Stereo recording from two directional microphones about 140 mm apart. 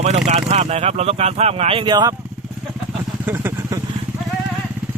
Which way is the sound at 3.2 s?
15° right (ahead or behind).